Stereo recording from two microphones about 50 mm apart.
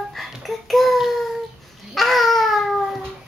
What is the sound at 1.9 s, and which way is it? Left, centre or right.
Babbling, centre.